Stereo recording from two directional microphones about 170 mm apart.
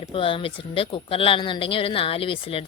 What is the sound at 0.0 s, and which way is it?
Speech, 30° left (ahead or behind).